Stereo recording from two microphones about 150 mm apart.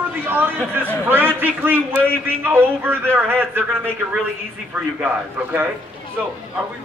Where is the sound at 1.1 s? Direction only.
15° right (ahead or behind).